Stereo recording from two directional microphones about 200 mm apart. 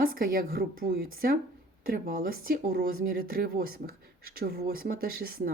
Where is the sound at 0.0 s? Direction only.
45° right (ahead or behind).